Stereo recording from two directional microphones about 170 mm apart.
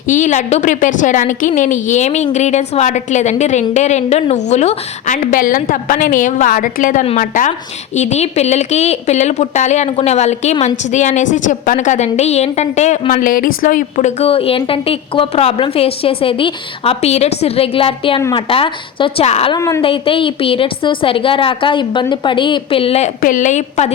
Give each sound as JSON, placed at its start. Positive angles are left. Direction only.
{"t": 0.1, "sound": "a woman's voice", "side_deg": 45}
{"t": 18.2, "sound": "a woman's voice", "side_deg": 20}
{"t": 18.4, "sound": "a woman's voice", "side_deg": 30}
{"t": 19.5, "sound": "a woman's voice", "side_deg": 15}
{"t": 19.8, "sound": "a woman's voice", "side_deg": 30}